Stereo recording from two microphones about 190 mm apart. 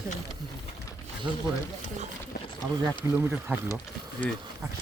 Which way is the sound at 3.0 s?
10° right (ahead or behind).